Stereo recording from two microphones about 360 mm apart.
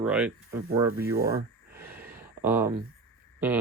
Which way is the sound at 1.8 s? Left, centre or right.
Centre.